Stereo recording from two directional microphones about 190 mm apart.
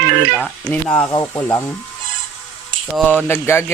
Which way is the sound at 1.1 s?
20° left (ahead or behind).